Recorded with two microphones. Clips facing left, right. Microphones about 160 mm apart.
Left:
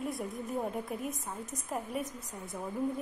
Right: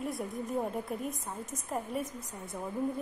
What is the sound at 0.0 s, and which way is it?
A woman's voice, centre (ahead or behind).